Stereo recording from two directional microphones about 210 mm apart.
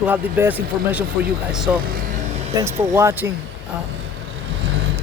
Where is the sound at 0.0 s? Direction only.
10° right (ahead or behind).